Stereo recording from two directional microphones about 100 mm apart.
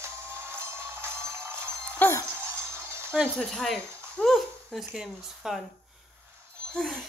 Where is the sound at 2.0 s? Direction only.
25° left (ahead or behind).